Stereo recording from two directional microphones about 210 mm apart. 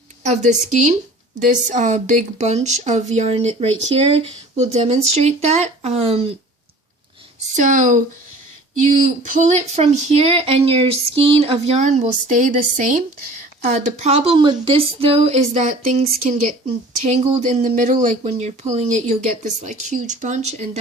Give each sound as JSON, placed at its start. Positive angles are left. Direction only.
{"t": 0.2, "sound": "speech", "side_deg": -35}
{"t": 7.5, "sound": "speech", "side_deg": -35}